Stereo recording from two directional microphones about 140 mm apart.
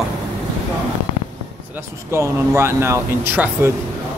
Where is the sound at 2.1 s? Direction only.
20° right (ahead or behind).